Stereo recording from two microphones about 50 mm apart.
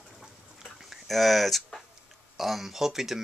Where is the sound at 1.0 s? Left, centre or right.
Centre.